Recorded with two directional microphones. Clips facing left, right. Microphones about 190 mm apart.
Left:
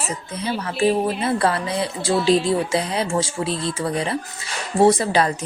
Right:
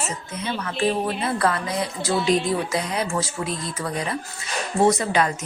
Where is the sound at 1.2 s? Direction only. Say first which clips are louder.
Left 2 dB; 30° left (ahead or behind).